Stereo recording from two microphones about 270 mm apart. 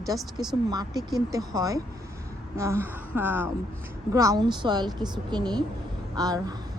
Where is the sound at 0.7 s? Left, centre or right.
Centre.